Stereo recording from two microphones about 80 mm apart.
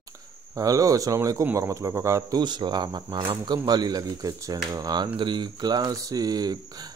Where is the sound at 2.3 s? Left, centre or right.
Right.